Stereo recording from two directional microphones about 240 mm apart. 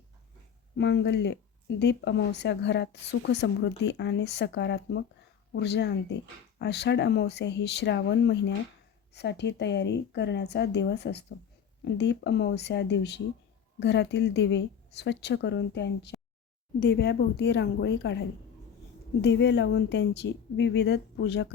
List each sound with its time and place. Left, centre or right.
0.8 s speech: left